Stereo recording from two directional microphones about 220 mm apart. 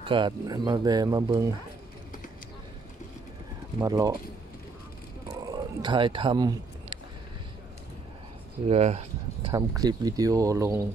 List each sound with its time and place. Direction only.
0.0 s speech: 20° right (ahead or behind)
3.8 s speech: 15° right (ahead or behind)
5.5 s speech: 20° right (ahead or behind)
8.6 s speech: 30° right (ahead or behind); by 10.9 s 15° right (ahead or behind)